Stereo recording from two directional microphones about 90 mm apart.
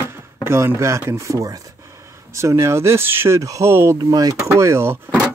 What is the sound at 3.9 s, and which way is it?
Speech, 45° right (ahead or behind).